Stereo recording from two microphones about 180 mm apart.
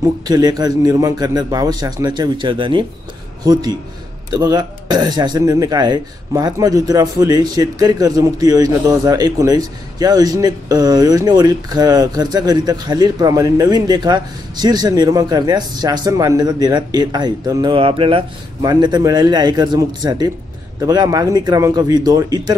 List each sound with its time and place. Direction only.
0.3 s speech: 20° right (ahead or behind)
4.3 s speech: 20° right (ahead or behind)